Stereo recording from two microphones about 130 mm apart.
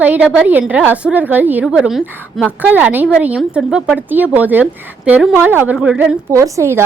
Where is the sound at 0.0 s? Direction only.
10° right (ahead or behind).